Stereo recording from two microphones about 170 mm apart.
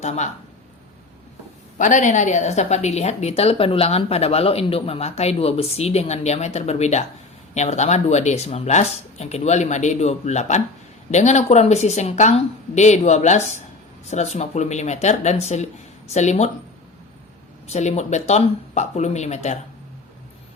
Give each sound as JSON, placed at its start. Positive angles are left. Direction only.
{"t": 0.0, "sound": "speech", "side_deg": 40}
{"t": 1.8, "sound": "a woman's voice", "side_deg": 45}
{"t": 17.7, "sound": "a woman's voice", "side_deg": 40}